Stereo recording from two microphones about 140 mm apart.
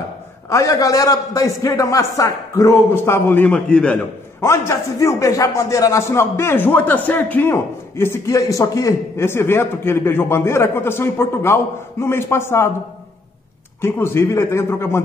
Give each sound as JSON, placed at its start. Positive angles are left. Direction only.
{"t": 0.5, "sound": "a man's voice", "side_deg": 25}
{"t": 4.4, "sound": "a man's voice", "side_deg": 20}
{"t": 13.7, "sound": "a man's voice", "side_deg": 15}